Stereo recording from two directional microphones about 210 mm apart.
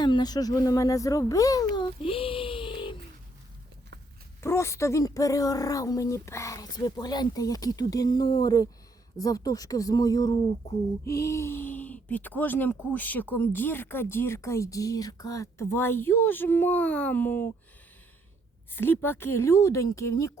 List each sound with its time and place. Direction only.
0.0 s speech: 20° left (ahead or behind)
1.7 s a sound: 25° left (ahead or behind)
4.4 s speech: 10° left (ahead or behind)
18.7 s speech: 10° left (ahead or behind)